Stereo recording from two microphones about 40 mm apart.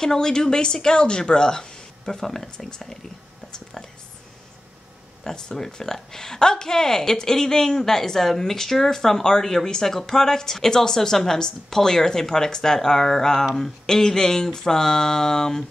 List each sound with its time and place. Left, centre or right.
0.0 s speech: centre
5.2 s speech: centre